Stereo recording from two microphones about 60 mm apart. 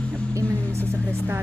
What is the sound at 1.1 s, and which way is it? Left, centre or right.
Speech, right.